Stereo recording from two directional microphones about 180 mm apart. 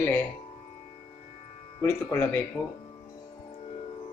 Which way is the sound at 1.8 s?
10° left (ahead or behind).